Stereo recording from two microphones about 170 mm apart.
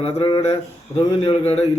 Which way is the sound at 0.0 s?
35° left (ahead or behind).